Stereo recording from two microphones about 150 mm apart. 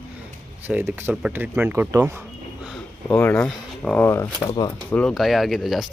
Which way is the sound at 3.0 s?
15° left (ahead or behind).